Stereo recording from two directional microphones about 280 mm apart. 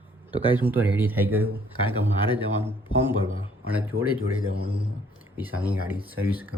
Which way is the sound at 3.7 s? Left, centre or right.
Centre.